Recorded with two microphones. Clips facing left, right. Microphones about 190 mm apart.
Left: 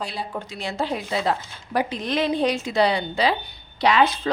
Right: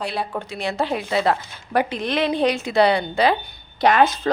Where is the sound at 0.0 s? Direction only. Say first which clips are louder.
Right 4 dB; 65° right (ahead or behind).